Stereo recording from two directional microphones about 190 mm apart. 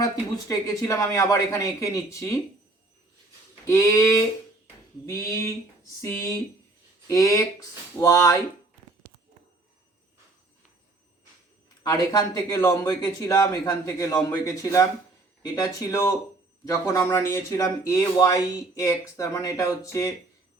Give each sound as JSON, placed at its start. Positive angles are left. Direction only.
{"t": 0.0, "sound": "speech", "side_deg": 15}
{"t": 3.7, "sound": "speech", "side_deg": 15}
{"t": 11.8, "sound": "a man's voice", "side_deg": 20}